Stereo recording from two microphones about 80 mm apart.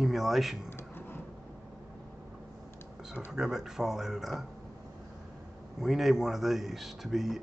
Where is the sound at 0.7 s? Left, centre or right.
Left.